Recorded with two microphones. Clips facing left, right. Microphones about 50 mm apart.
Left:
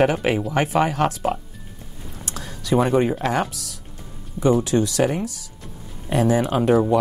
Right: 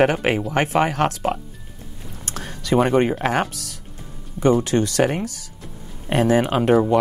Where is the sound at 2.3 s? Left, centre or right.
Right.